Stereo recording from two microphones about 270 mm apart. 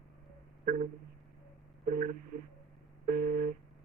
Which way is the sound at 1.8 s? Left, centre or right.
Right.